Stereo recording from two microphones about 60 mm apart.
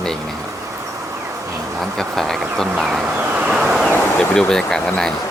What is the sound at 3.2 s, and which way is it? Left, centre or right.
Vehicle, centre.